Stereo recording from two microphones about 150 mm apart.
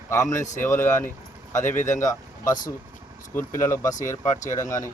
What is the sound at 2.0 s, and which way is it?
Speech, 25° left (ahead or behind).